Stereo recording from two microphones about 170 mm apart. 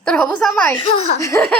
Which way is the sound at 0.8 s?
35° left (ahead or behind).